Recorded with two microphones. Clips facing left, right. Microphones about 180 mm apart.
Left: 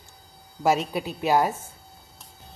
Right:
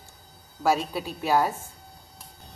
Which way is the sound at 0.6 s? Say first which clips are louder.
Left 2 dB; 20° left (ahead or behind).